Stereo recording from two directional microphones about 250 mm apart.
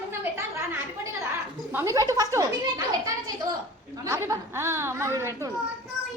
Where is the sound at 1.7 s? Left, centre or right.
Centre.